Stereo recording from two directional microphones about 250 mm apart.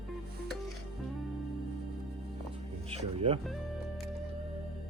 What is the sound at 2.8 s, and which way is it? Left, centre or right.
Speech, right.